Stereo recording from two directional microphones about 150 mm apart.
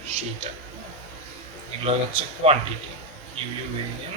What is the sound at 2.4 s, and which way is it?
Speech, 40° right (ahead or behind).